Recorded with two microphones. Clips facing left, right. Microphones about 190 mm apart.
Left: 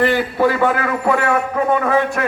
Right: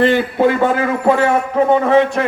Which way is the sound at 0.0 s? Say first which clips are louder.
Right 3 dB; 20° right (ahead or behind).